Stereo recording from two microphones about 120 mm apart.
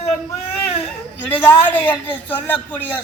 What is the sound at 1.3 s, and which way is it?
Speech, 15° left (ahead or behind).